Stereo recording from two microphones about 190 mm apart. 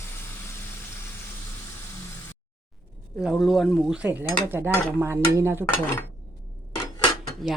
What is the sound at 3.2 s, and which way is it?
Stir, centre (ahead or behind).